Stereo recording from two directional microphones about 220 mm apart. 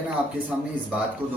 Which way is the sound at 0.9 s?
5° right (ahead or behind).